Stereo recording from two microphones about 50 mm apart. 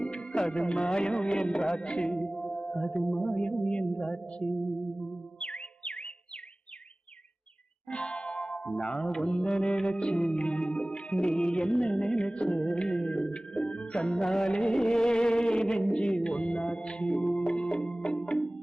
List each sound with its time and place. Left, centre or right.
0.0 s music: centre
7.9 s music: centre